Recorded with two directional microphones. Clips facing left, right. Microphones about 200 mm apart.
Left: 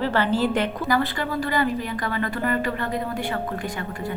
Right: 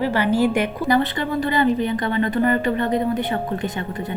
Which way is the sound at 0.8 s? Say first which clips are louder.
Right 4 dB; 20° right (ahead or behind).